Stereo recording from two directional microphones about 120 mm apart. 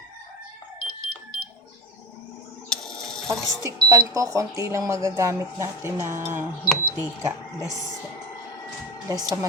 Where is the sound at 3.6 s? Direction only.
30° right (ahead or behind).